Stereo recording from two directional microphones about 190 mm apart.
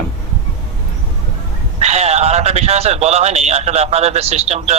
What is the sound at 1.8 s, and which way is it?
Speech, 35° right (ahead or behind).